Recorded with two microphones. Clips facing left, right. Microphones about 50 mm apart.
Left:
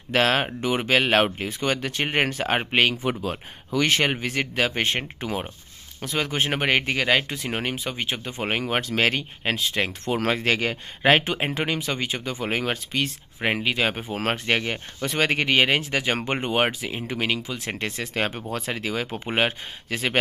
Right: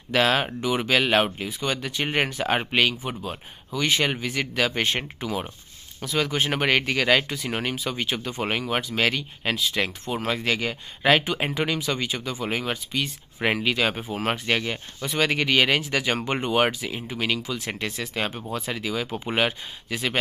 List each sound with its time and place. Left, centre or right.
0.1 s speech: left
1.0 s speech: left
3.3 s speech: left
3.9 s speech: left
10.0 s speech: left
11.0 s speech: left
13.4 s speech: centre
14.1 s speech: left